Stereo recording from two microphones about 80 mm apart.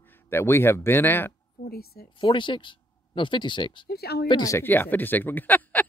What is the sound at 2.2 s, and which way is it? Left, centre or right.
Speech, left.